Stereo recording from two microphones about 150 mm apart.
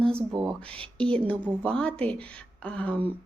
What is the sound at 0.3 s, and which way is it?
Speech, 30° right (ahead or behind).